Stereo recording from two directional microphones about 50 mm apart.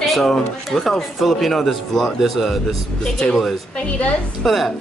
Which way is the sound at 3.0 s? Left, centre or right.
Centre.